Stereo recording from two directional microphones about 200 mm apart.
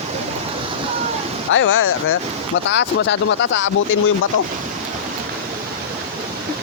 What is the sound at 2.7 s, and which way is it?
Speech, 65° left (ahead or behind).